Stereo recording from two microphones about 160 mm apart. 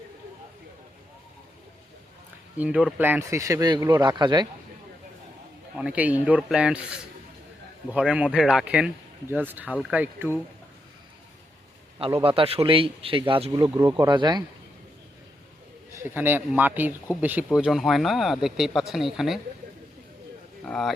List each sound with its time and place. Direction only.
2.6 s speech: 5° right (ahead or behind); by 4.4 s 25° right (ahead or behind)
5.7 s speech: 5° right (ahead or behind)
12.4 s speech: 35° right (ahead or behind)
13.5 s speech: 20° right (ahead or behind)
16.0 s speech: 15° right (ahead or behind)
20.7 s speech: centre (ahead or behind)